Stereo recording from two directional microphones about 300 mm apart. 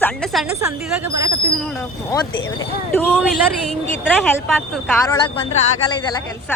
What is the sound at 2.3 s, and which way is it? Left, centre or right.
Speech, left.